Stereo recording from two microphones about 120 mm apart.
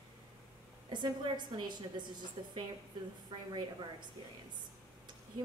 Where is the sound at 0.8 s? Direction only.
40° right (ahead or behind).